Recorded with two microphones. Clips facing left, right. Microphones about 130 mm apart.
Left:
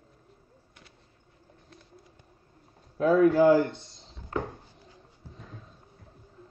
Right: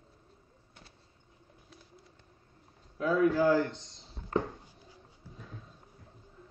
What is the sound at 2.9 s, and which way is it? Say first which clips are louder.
Speech: left 6 dB; 45° left (ahead or behind).